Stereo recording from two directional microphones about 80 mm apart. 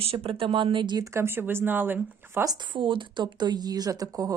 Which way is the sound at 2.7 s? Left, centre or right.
Right.